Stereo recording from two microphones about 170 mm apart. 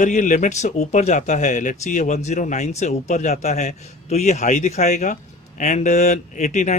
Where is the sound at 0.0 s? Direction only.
45° left (ahead or behind).